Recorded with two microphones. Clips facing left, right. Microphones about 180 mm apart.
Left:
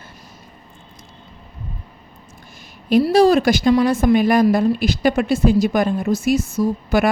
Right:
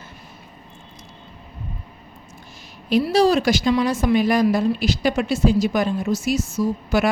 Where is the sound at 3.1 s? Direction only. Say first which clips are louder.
Left 3 dB; 55° left (ahead or behind).